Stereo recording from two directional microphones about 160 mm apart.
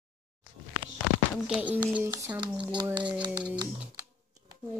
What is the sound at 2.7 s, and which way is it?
Speech, 30° right (ahead or behind).